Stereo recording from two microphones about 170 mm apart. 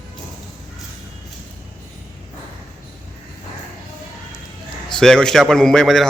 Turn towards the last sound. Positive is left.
turn(degrees=0)  # may be behind; listen again after turning